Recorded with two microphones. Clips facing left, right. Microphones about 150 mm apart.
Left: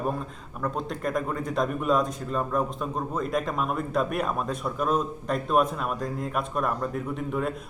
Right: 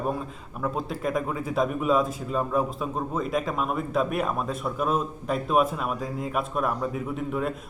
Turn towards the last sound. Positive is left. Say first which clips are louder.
# even
turn(degrees=0)  # may be behind; listen again after turning